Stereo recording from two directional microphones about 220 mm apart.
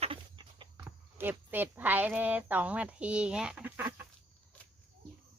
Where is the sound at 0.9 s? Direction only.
10° right (ahead or behind).